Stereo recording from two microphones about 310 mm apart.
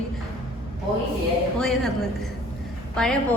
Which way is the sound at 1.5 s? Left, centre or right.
Centre.